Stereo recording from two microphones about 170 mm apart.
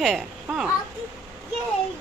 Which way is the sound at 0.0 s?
Centre (ahead or behind).